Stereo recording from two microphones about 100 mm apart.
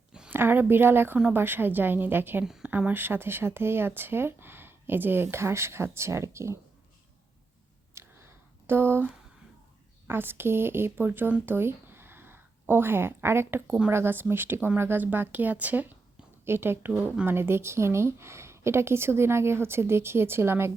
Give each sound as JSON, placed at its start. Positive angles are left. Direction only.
{"t": 0.3, "sound": "speech", "side_deg": -20}
{"t": 2.4, "sound": "a woman's voice", "side_deg": -5}
{"t": 7.9, "sound": "a sound", "side_deg": -25}
{"t": 10.1, "sound": "a woman's voice", "side_deg": -20}